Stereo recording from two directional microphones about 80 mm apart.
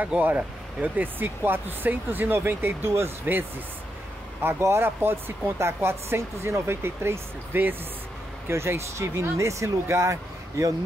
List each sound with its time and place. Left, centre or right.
0.0 s a woman's voice: centre; by 10.1 s right